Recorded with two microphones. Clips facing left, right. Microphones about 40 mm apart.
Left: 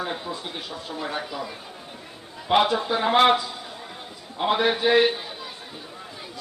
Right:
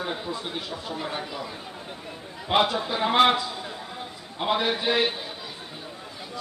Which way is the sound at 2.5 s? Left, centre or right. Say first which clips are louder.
Left 3 dB; centre.